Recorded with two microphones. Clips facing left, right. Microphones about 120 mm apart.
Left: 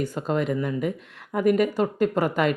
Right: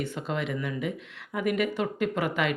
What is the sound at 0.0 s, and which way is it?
Speech, 40° left (ahead or behind).